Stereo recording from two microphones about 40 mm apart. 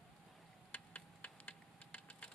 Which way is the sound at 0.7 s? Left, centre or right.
Left.